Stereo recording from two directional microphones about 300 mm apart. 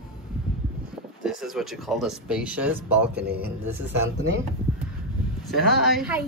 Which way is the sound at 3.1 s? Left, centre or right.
Right.